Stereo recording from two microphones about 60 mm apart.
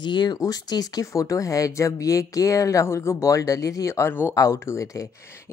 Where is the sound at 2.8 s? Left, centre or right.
Left.